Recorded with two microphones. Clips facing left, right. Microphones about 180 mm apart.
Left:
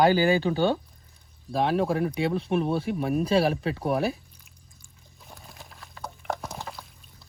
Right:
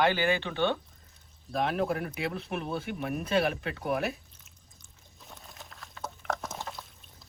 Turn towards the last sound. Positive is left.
turn(degrees=0)  # may be behind; listen again after turning